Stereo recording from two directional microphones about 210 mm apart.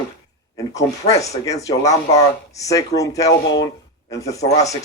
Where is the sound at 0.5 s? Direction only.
15° left (ahead or behind).